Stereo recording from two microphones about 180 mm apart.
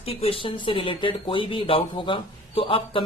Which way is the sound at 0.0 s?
35° left (ahead or behind).